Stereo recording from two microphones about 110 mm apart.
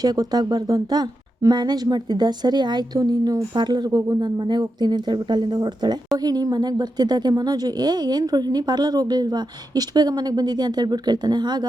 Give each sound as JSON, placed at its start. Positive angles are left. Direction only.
{"t": 0.0, "sound": "speech", "side_deg": -35}